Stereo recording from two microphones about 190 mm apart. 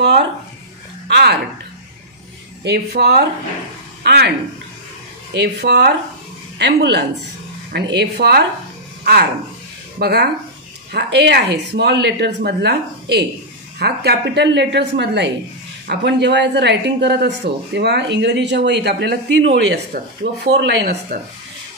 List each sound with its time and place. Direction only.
1.0 s speech: 60° right (ahead or behind)
2.6 s a man's voice: 60° right (ahead or behind)
5.3 s a man's voice: 65° right (ahead or behind)